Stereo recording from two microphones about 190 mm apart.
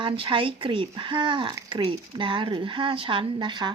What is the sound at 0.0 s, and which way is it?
Speech, 25° right (ahead or behind).